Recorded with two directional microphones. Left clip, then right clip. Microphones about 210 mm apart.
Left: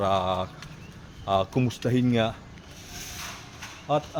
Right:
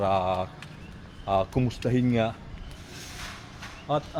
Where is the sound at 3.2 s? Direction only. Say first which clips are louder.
Left 2 dB; 45° left (ahead or behind).